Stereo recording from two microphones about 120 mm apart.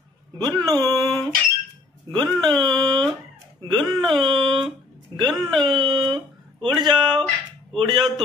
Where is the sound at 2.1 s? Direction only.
35° right (ahead or behind).